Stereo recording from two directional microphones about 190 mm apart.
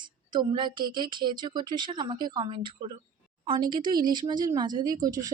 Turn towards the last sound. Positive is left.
turn(degrees=-20)  # may be behind; listen again after turning